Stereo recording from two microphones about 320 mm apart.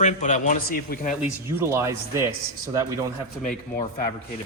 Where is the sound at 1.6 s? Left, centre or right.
Centre.